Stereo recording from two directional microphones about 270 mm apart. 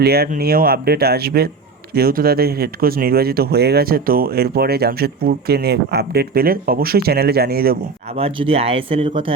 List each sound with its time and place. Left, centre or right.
0.0 s speech: right
8.1 s speech: right